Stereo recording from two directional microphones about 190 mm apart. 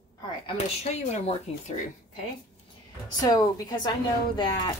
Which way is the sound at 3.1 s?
20° left (ahead or behind).